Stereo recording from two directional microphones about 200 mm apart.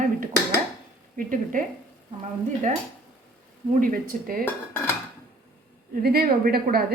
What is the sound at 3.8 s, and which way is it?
Speech, 45° right (ahead or behind).